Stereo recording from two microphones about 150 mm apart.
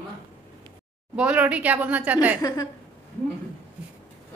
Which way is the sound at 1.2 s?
10° right (ahead or behind).